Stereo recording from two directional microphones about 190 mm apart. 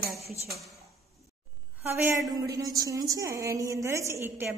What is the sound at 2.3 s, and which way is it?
A woman's voice, 20° right (ahead or behind).